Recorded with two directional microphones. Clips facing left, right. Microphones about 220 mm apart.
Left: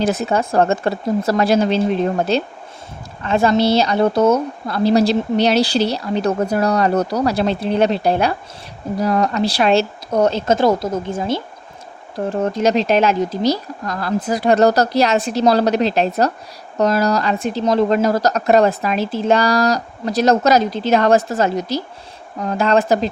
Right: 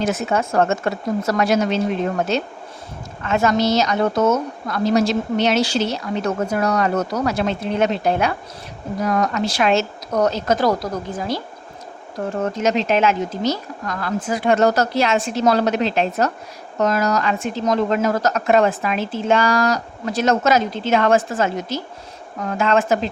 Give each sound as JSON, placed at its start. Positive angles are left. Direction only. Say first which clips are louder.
{"t": 0.0, "sound": "a woman's voice", "louder": "left 2 dB", "side_deg": 35}